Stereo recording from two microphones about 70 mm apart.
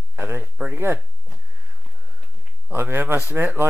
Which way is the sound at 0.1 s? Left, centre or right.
Right.